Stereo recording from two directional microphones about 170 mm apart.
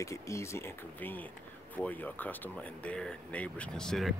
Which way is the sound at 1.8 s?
10° left (ahead or behind).